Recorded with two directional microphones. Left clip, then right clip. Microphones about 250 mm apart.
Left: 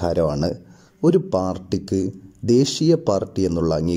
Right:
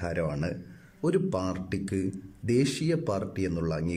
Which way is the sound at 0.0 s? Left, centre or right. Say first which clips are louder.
Left 11 dB; centre.